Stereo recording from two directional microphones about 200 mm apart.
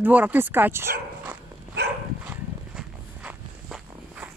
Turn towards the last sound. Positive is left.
turn(degrees=-5)  # may be behind; listen again after turning